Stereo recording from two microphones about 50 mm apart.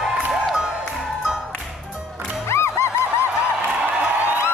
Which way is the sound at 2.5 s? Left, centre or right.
Left.